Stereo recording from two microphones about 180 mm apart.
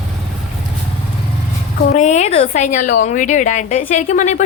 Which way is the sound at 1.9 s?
40° left (ahead or behind).